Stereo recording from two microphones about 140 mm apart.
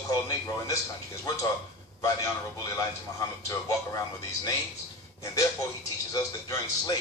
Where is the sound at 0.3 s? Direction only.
25° left (ahead or behind).